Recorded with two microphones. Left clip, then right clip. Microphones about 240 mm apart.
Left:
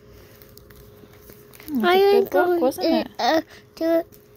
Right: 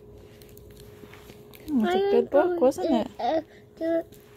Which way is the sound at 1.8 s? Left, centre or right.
Left.